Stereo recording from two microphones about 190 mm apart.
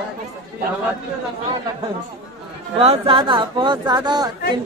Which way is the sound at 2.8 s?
30° right (ahead or behind).